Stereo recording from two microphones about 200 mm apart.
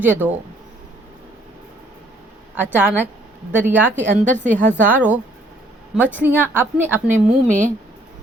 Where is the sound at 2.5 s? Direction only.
10° right (ahead or behind).